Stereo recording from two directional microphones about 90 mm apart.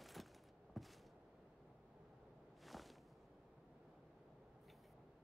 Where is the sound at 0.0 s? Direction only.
Centre (ahead or behind).